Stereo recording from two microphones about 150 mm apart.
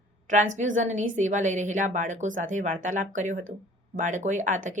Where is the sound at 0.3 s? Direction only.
55° right (ahead or behind).